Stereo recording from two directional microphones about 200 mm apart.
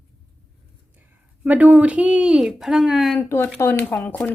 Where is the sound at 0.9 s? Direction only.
10° right (ahead or behind).